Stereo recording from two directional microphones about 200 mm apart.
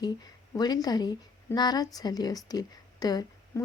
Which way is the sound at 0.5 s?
20° left (ahead or behind).